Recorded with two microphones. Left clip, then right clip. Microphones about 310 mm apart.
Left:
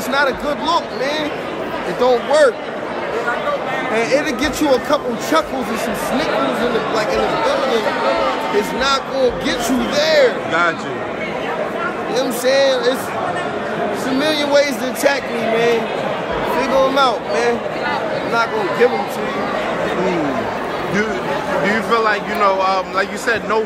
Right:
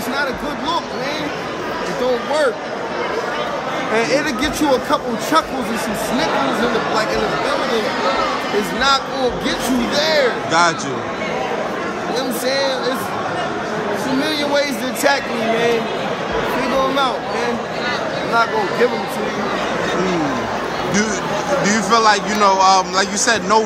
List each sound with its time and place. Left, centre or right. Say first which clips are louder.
0.1 s a man's voice: left 6 dB; centre
2.0 s a man's voice: left 5 dB; centre
3.9 s a man's voice: even; centre
9.9 s a man's voice: left 3 dB; centre
12.2 s a man's voice: left 5 dB; centre
14.2 s a man's voice: left 5 dB; centre
21.6 s a man's voice: right 2 dB; centre